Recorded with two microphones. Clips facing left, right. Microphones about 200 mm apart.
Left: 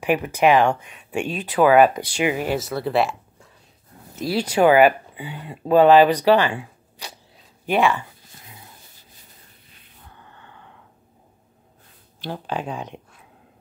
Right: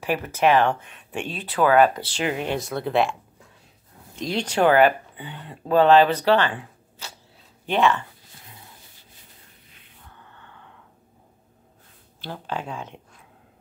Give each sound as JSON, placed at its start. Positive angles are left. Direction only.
{"t": 0.0, "sound": "speech", "side_deg": 15}
{"t": 12.2, "sound": "speech", "side_deg": 15}